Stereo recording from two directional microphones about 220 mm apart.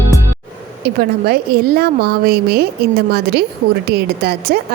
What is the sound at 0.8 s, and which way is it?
A woman's voice, 45° right (ahead or behind).